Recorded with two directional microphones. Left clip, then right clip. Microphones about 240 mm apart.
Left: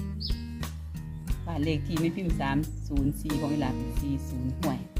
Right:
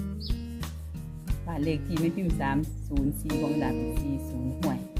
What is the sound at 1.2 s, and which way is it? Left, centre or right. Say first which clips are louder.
Speech: right 1 dB; centre.